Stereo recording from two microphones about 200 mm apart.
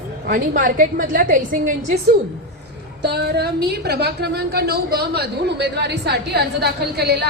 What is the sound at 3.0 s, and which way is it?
A woman's voice, 55° right (ahead or behind).